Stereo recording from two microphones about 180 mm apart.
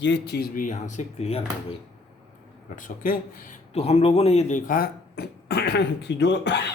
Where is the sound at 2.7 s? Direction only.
50° left (ahead or behind); by 6.7 s 70° left (ahead or behind).